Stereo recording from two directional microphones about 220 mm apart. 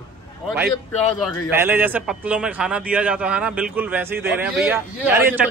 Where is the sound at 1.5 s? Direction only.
10° right (ahead or behind).